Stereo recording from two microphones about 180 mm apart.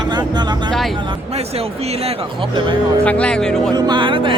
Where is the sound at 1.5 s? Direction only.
35° right (ahead or behind).